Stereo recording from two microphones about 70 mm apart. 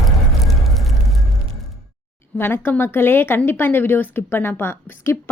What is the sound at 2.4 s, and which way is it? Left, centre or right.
Speech, left.